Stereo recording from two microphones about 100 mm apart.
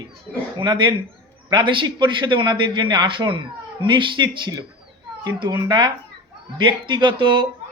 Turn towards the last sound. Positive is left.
turn(degrees=-55)  # may be behind; listen again after turning